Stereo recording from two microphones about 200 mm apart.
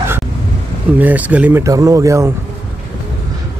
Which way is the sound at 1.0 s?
10° right (ahead or behind).